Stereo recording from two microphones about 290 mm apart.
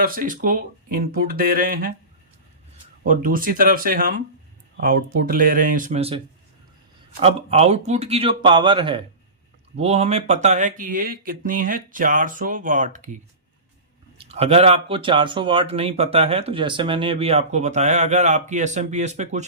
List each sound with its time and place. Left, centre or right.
0.0 s speech: right
3.0 s speech: right
14.2 s speech: centre